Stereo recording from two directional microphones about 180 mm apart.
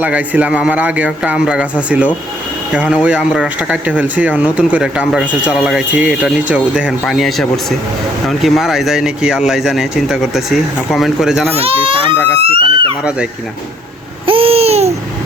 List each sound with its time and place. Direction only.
0.0 s speech: 10° right (ahead or behind)
11.5 s speech: 30° right (ahead or behind)
14.3 s babbling: 30° right (ahead or behind)